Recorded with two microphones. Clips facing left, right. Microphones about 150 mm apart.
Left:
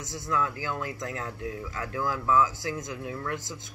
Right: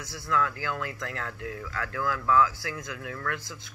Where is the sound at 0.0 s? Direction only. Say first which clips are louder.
Right 1 dB; 20° left (ahead or behind).